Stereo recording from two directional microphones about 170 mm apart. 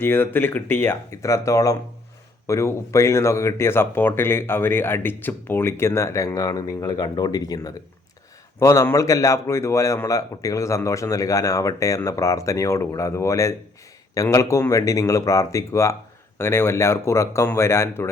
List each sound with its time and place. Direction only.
0.0 s speech: 10° left (ahead or behind)